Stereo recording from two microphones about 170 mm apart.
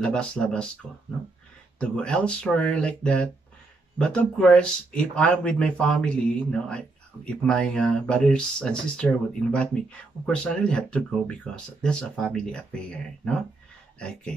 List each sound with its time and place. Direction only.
0.0 s speech: 5° left (ahead or behind)
1.8 s speech: 5° left (ahead or behind)
7.2 s speech: 5° left (ahead or behind)